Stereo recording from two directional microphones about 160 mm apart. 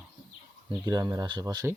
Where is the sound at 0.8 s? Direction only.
25° right (ahead or behind).